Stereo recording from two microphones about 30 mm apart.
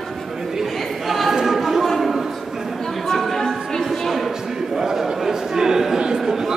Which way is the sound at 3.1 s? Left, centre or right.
Centre.